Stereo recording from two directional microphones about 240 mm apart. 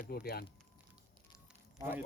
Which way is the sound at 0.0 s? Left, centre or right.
Left.